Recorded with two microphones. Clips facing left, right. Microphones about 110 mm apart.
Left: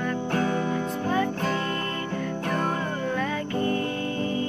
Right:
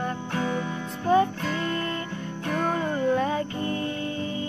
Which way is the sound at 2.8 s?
25° right (ahead or behind).